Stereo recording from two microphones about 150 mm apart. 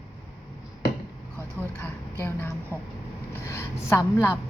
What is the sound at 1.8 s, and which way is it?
A woman's voice, 15° left (ahead or behind).